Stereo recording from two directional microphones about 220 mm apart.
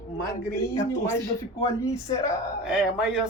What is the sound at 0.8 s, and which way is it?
Speech, 10° left (ahead or behind).